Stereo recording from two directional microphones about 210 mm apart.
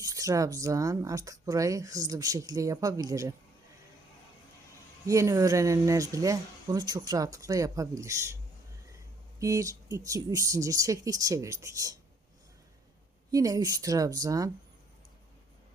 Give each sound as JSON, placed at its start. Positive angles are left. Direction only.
{"t": 0.0, "sound": "speech", "side_deg": -15}
{"t": 5.0, "sound": "speech", "side_deg": -15}
{"t": 9.4, "sound": "speech", "side_deg": -15}
{"t": 13.3, "sound": "speech", "side_deg": -15}